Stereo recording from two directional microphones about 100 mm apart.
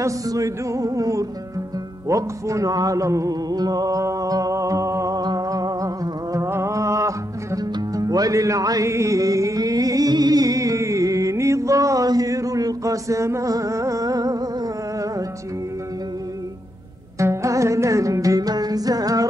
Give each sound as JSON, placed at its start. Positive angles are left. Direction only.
{"t": 0.0, "sound": "music", "side_deg": -35}
{"t": 17.2, "sound": "music", "side_deg": -30}